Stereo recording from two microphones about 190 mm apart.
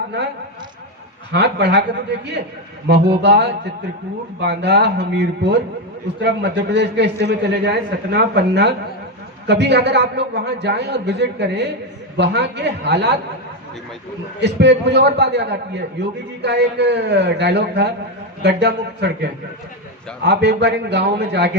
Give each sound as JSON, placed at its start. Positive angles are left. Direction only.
{"t": 1.3, "sound": "a man's voice", "side_deg": -60}
{"t": 2.8, "sound": "a man's voice", "side_deg": -60}
{"t": 14.4, "sound": "a man's voice", "side_deg": -65}